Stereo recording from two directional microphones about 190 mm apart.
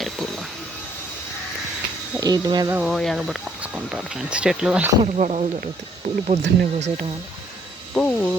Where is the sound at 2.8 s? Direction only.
Centre (ahead or behind).